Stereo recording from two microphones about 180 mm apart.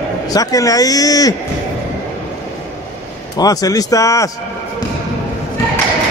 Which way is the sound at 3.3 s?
20° left (ahead or behind).